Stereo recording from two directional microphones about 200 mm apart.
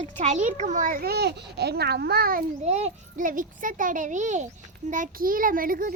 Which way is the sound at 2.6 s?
35° right (ahead or behind).